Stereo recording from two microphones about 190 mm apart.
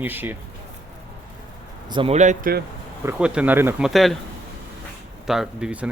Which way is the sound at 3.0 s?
5° right (ahead or behind).